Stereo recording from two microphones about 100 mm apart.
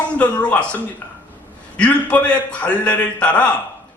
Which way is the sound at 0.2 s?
15° left (ahead or behind).